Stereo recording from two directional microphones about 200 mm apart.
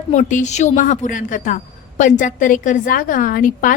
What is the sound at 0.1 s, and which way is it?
A woman's voice, 35° left (ahead or behind).